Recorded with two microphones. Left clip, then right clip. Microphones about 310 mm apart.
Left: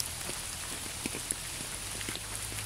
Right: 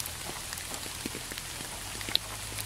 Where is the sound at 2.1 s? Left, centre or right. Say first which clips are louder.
Right 11 dB; right.